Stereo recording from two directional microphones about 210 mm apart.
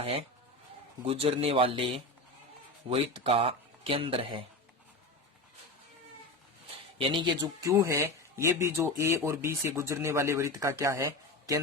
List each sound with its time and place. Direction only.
0.0 s speech: 25° right (ahead or behind)
7.0 s speech: 20° right (ahead or behind)